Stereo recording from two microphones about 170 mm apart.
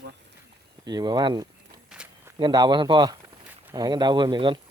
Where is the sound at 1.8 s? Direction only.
5° right (ahead or behind).